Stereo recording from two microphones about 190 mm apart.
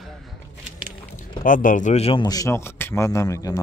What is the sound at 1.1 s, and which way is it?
A man's voice, 45° left (ahead or behind).